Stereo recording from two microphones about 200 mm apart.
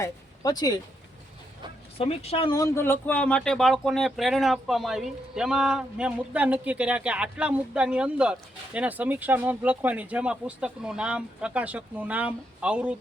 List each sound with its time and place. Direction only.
0.0 s speech: 20° left (ahead or behind)
2.0 s speech: 30° left (ahead or behind)
2.6 s speech: 10° left (ahead or behind); by 13.0 s 5° right (ahead or behind)